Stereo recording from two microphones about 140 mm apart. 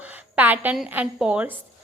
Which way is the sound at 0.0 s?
10° right (ahead or behind).